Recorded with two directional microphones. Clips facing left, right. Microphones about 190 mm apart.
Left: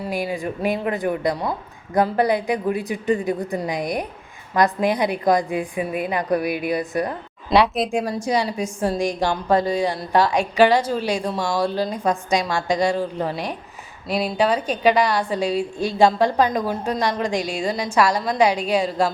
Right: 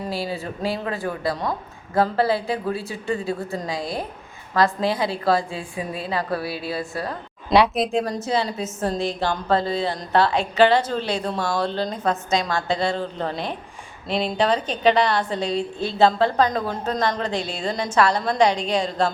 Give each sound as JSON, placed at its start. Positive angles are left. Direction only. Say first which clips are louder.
{"t": 0.1, "sound": "a woman's voice", "louder": "left 3 dB", "side_deg": 15}
{"t": 7.5, "sound": "speech", "louder": "even", "side_deg": 0}
{"t": 7.9, "sound": "a woman's voice", "louder": "left 1 dB", "side_deg": 10}